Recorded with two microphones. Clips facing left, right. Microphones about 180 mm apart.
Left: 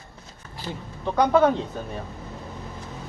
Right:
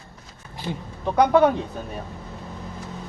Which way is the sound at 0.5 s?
15° right (ahead or behind).